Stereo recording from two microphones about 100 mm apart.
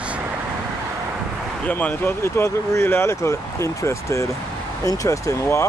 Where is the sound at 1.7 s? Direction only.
15° left (ahead or behind).